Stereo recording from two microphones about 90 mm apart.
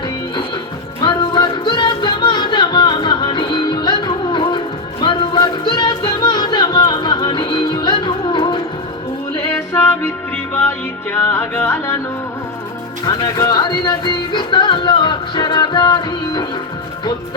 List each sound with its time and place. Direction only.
1.0 s music: 60° left (ahead or behind)
9.6 s music: 30° left (ahead or behind)
13.1 s music: 45° left (ahead or behind)